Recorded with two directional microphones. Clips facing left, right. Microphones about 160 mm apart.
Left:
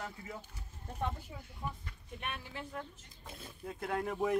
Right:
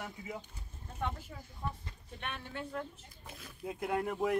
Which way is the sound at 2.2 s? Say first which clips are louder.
Right 2 dB; 5° left (ahead or behind).